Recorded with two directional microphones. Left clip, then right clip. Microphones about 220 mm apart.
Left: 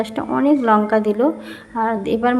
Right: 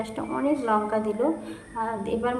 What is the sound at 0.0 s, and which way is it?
A woman's voice, 35° left (ahead or behind).